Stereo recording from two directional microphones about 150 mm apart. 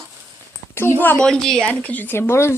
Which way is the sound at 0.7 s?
15° left (ahead or behind).